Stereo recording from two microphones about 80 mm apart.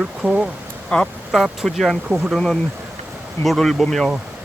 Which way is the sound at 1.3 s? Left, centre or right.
Centre.